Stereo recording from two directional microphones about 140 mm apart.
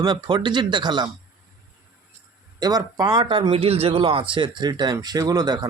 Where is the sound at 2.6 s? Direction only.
30° right (ahead or behind).